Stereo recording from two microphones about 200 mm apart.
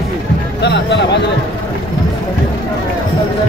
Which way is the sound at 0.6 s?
60° left (ahead or behind).